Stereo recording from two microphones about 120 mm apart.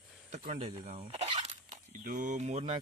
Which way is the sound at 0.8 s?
75° right (ahead or behind).